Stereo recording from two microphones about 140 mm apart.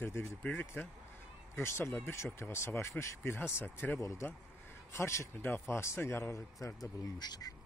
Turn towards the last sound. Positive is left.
turn(degrees=30)  # may be behind; listen again after turning